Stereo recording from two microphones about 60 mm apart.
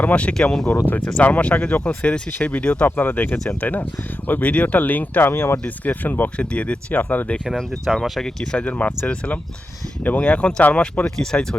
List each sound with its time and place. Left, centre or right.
0.0 s speech: left
1.2 s speech: left
2.8 s speech: left
5.3 s speech: left
5.6 s speech: left
6.3 s speech: centre
7.5 s speech: centre
8.5 s speech: left
11.2 s speech: centre